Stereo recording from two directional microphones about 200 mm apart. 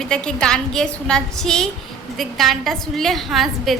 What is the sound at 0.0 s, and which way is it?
A woman's voice, 5° left (ahead or behind).